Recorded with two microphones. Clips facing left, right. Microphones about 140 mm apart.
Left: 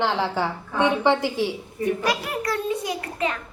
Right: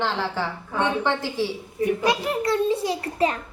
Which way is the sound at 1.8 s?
20° right (ahead or behind).